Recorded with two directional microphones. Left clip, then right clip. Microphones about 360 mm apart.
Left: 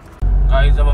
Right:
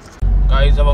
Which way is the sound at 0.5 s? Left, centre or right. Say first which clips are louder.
Right 1 dB; centre.